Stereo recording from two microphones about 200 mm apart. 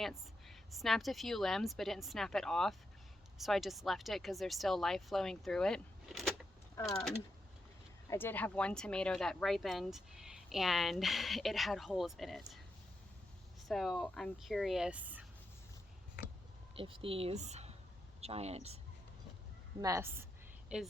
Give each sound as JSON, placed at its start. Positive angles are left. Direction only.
{"t": 0.0, "sound": "speech", "side_deg": 0}
{"t": 8.0, "sound": "speech", "side_deg": 15}
{"t": 13.7, "sound": "speech", "side_deg": 0}
{"t": 16.7, "sound": "speech", "side_deg": -25}
{"t": 19.8, "sound": "a woman's voice", "side_deg": -15}